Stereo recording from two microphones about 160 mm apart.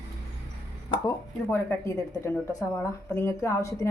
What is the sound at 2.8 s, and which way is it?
Speech, 15° left (ahead or behind).